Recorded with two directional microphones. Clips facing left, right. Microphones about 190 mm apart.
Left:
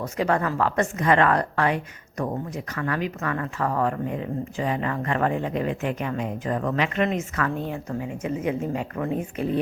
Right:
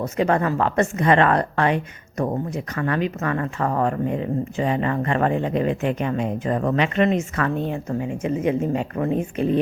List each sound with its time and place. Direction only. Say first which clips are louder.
0.2 s speech: right 3 dB; 25° right (ahead or behind)